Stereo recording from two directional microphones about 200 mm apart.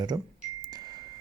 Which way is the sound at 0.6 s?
20° right (ahead or behind).